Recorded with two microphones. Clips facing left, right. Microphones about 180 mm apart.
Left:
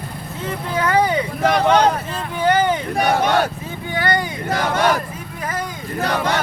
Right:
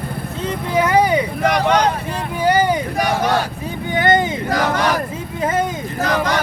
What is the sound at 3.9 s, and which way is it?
Vehicle, 20° right (ahead or behind).